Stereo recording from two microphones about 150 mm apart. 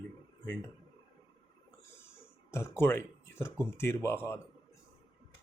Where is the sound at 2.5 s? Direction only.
15° left (ahead or behind).